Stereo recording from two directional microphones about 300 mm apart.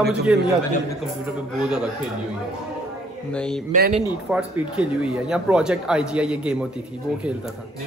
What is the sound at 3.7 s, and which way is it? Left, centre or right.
Speech, right.